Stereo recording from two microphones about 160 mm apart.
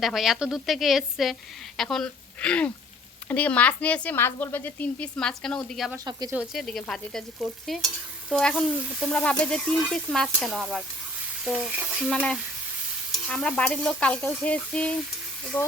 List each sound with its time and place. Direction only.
0.0 s speech: centre (ahead or behind)
6.1 s frying: 25° right (ahead or behind)
6.3 s speech: 5° right (ahead or behind)